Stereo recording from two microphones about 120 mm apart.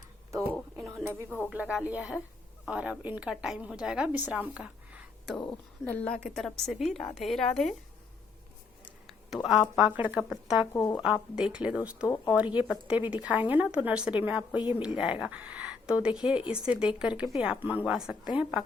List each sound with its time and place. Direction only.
0.5 s bird: 5° left (ahead or behind)
0.9 s a sound: 15° right (ahead or behind)
1.5 s a woman's voice: 10° right (ahead or behind)
5.8 s a woman's voice: 10° left (ahead or behind)
8.8 s a sound: centre (ahead or behind)
9.9 s a woman's voice: 15° right (ahead or behind)
10.8 s speech: 30° left (ahead or behind)
11.0 s a woman's voice: 5° right (ahead or behind)
12.0 s speech: 30° left (ahead or behind)
12.5 s a woman's voice: 10° right (ahead or behind)